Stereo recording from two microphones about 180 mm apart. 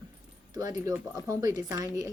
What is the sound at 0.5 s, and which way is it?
Speech, 20° right (ahead or behind).